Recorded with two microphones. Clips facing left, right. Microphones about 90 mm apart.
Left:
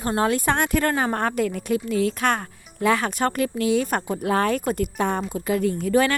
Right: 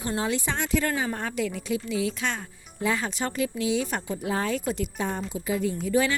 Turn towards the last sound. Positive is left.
turn(degrees=55)  # may be behind; listen again after turning